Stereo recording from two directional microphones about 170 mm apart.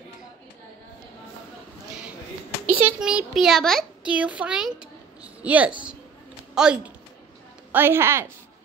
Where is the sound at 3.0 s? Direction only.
5° right (ahead or behind).